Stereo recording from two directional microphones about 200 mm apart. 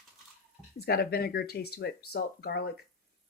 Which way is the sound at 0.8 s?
50° left (ahead or behind).